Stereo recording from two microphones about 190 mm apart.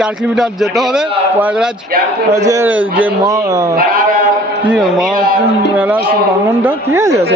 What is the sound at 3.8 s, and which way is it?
Sheep, 45° right (ahead or behind).